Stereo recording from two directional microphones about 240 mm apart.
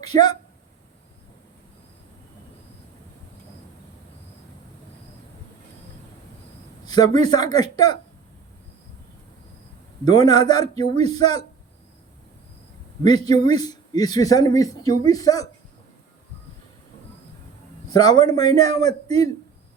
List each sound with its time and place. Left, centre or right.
0.0 s a man's voice: centre
6.8 s a man's voice: centre
10.0 s a man's voice: centre
13.0 s a man's voice: centre
17.8 s a man's voice: centre